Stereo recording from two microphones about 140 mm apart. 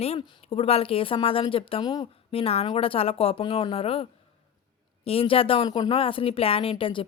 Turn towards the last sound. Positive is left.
turn(degrees=40)  # may be behind; listen again after turning